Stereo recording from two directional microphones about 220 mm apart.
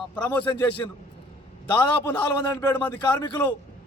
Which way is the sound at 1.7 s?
10° left (ahead or behind).